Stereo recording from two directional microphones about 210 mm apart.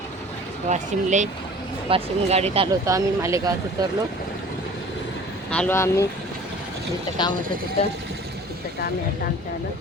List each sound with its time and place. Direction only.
0.7 s speech: 35° right (ahead or behind)
2.8 s speech: 15° right (ahead or behind)
5.5 s speech: 5° left (ahead or behind)
7.2 s speech: 20° left (ahead or behind)